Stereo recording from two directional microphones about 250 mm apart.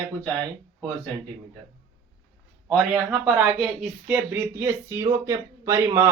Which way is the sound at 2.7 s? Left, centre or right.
Centre.